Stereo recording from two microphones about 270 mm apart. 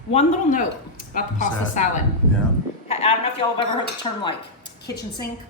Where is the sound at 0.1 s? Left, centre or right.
Left.